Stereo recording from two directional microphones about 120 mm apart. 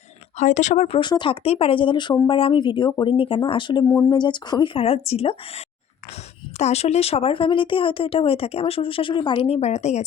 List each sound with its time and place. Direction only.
0.3 s speech: 80° left
0.9 s speech: 40° left (ahead or behind)
1.5 s speech: 50° left (ahead or behind); by 10.0 s 70° left (ahead or behind)